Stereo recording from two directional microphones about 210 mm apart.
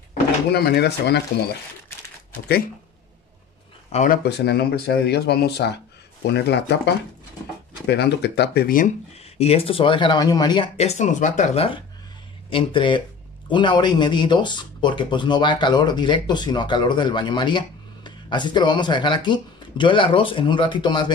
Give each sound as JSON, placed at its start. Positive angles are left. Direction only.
{"t": 0.5, "sound": "speech", "side_deg": 50}
{"t": 3.9, "sound": "speech", "side_deg": 35}
{"t": 4.2, "sound": "speech", "side_deg": 50}
{"t": 7.8, "sound": "speech", "side_deg": 50}
{"t": 9.4, "sound": "speech", "side_deg": 30}